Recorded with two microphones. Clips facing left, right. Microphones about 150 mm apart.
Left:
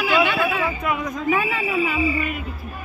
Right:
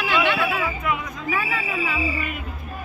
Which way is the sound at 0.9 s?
25° left (ahead or behind).